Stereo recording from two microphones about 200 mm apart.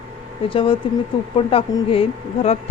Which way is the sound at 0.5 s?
25° left (ahead or behind).